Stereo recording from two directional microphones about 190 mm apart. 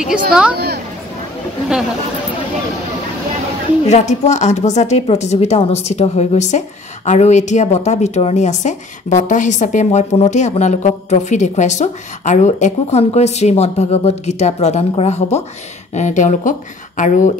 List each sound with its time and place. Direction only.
0.1 s a woman's voice: 5° right (ahead or behind)
3.8 s a woman's voice: 35° left (ahead or behind)